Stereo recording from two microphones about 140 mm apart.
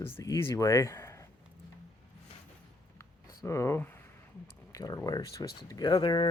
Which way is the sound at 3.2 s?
20° left (ahead or behind).